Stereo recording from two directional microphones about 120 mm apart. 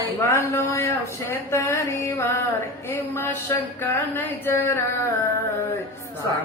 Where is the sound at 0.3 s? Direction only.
20° left (ahead or behind).